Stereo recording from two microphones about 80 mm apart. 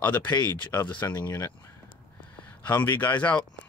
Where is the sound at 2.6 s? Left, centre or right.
Left.